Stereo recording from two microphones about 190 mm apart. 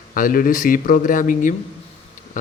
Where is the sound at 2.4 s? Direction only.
40° left (ahead or behind).